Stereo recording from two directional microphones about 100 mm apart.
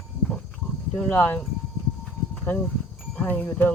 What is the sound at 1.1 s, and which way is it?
Speech, 20° left (ahead or behind).